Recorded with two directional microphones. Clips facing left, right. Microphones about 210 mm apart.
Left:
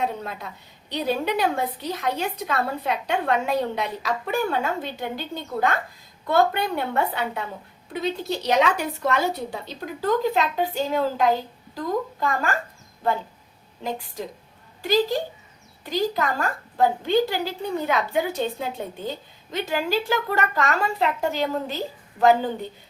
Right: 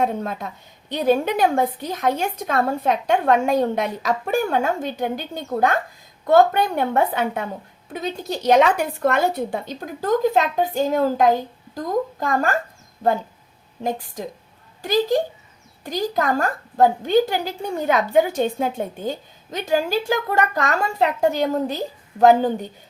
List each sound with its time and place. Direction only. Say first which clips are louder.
0.0 s a woman's voice: right 5 dB; 50° right (ahead or behind)
15.8 s a woman's voice: right 1 dB; 45° right (ahead or behind)